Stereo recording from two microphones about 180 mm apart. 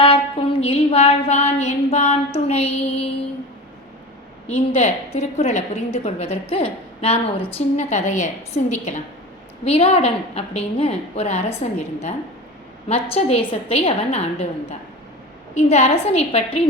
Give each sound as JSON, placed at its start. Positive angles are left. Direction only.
{"t": 0.0, "sound": "a sound", "side_deg": 30}
{"t": 4.4, "sound": "a woman's voice", "side_deg": 35}
{"t": 12.9, "sound": "a woman's voice", "side_deg": 35}